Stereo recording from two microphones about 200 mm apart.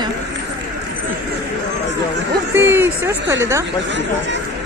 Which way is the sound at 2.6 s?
10° right (ahead or behind).